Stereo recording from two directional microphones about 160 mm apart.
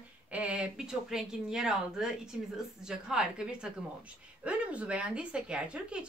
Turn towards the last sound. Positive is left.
turn(degrees=-5)  # may be behind; listen again after turning